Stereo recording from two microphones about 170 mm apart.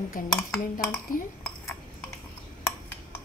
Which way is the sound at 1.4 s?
10° left (ahead or behind).